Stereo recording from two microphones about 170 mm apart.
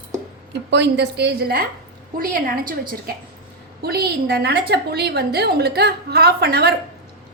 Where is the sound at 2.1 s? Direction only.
55° right (ahead or behind).